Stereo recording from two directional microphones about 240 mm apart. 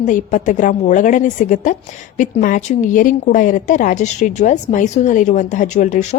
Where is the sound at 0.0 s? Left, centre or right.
Left.